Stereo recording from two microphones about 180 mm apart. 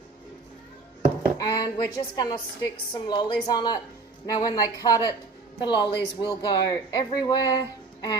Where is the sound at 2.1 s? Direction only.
25° left (ahead or behind).